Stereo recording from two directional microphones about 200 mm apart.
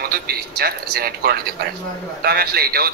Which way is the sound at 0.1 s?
50° right (ahead or behind).